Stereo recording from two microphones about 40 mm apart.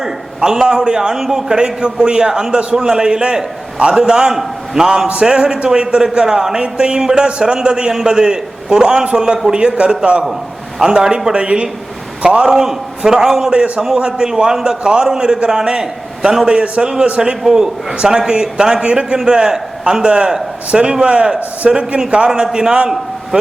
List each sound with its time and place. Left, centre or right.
0.0 s a man's voice: centre
1.1 s a man's voice: centre
5.2 s a man's voice: right
12.5 s a man's voice: centre
16.5 s a man's voice: right
17.2 s a man's voice: centre